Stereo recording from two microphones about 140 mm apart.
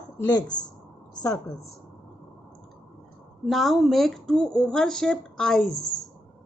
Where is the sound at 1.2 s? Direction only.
25° left (ahead or behind).